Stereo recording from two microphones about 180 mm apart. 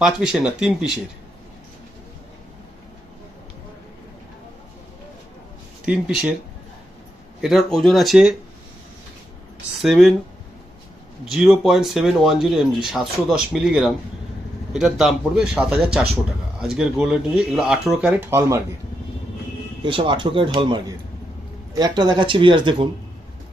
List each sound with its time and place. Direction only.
0.0 s speech: 5° right (ahead or behind)
5.8 s speech: 5° right (ahead or behind)
7.4 s speech: centre (ahead or behind)
9.8 s speech: centre (ahead or behind)
11.3 s speech: centre (ahead or behind)
19.8 s speech: 30° right (ahead or behind)